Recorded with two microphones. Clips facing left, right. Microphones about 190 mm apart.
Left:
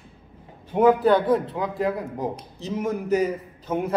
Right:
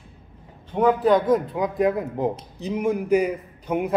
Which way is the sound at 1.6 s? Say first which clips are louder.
Right 4 dB; 20° right (ahead or behind).